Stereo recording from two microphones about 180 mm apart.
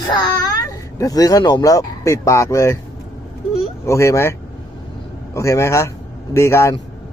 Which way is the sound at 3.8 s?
15° left (ahead or behind).